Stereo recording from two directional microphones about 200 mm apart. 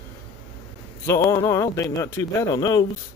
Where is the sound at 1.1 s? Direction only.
15° left (ahead or behind).